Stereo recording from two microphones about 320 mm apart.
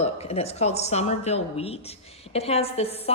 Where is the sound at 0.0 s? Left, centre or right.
Centre.